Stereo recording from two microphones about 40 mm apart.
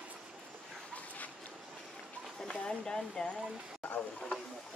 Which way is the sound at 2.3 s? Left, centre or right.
Left.